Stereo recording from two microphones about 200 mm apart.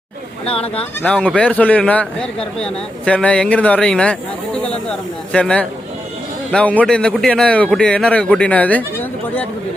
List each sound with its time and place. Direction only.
0.4 s speech: 30° left (ahead or behind)
1.0 s speech: 5° left (ahead or behind)